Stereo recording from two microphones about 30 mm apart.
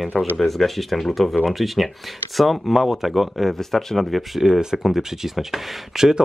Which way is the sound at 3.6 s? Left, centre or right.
Centre.